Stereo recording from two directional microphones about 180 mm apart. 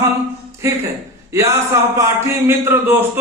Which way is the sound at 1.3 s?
15° right (ahead or behind).